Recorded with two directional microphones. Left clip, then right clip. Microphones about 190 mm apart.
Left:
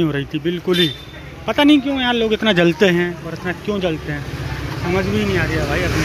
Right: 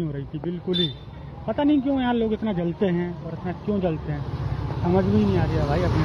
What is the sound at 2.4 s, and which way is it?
Speech, 35° left (ahead or behind).